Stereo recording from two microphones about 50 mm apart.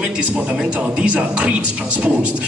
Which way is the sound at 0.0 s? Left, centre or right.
Right.